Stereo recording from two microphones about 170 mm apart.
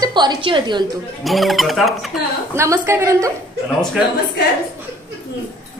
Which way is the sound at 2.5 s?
15° right (ahead or behind).